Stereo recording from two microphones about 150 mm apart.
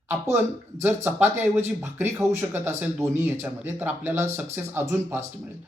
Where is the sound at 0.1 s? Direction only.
15° right (ahead or behind).